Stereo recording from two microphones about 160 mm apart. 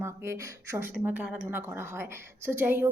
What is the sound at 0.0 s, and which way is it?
Speech, 15° right (ahead or behind).